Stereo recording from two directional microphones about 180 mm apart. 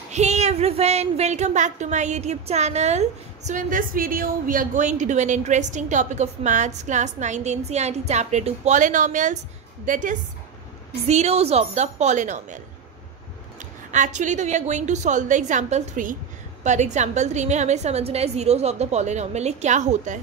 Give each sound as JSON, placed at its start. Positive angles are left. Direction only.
{"t": 0.1, "sound": "a woman's voice", "side_deg": -40}
{"t": 13.6, "sound": "a woman's voice", "side_deg": -45}